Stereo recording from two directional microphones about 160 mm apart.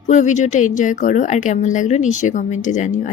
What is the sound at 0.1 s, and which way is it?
Speech, 50° left (ahead or behind).